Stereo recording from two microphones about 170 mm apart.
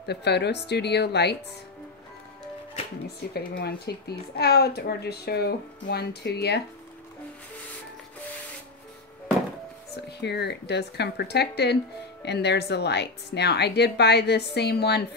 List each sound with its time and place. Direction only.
0.0 s a woman's voice: 80° left
3.2 s a woman's voice: 70° left (ahead or behind)
10.2 s a woman's voice: 80° left